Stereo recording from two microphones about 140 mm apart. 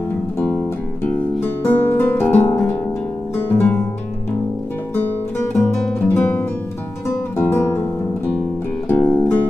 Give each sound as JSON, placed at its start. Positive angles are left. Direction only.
{"t": 1.0, "sound": "music", "side_deg": 15}
{"t": 6.0, "sound": "music", "side_deg": 15}
{"t": 8.8, "sound": "music", "side_deg": 15}